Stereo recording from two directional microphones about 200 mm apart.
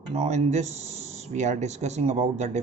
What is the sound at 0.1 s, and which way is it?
Speech, 35° right (ahead or behind).